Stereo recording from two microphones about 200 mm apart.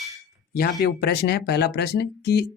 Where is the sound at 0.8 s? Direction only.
50° left (ahead or behind).